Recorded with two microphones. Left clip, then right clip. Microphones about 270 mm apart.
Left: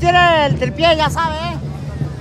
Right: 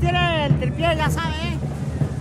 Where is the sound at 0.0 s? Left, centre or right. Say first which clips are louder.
Left 10 dB; left.